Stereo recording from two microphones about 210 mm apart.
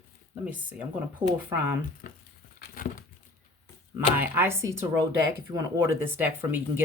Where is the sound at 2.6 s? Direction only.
40° left (ahead or behind).